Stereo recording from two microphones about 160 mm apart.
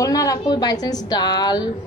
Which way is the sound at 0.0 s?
20° left (ahead or behind).